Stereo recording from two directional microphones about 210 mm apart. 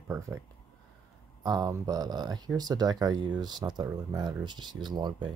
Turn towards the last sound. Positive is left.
turn(degrees=-20)  # may be behind; listen again after turning